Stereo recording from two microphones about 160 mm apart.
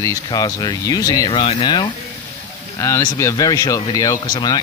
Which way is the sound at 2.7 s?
20° left (ahead or behind).